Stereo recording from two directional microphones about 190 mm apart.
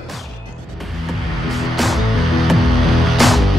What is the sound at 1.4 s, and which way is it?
Music, centre (ahead or behind).